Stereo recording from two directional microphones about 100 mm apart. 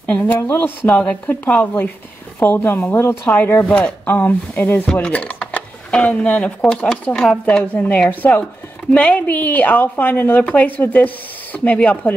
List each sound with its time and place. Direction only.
0.0 s speech: 15° left (ahead or behind)
0.8 s a woman's voice: 15° left (ahead or behind)